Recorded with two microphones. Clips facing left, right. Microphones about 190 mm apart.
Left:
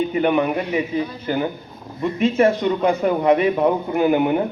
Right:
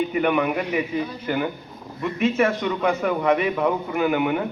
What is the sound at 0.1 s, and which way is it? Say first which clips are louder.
Speech: left 3 dB; 30° left (ahead or behind).